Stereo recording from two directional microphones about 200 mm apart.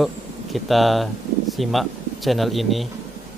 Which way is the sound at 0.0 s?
Centre (ahead or behind).